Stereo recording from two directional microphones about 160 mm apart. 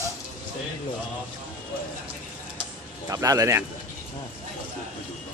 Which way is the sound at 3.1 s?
20° right (ahead or behind).